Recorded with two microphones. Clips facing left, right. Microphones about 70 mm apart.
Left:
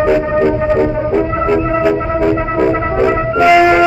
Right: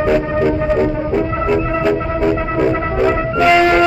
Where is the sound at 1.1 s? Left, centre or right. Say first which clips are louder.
Left 3 dB; centre.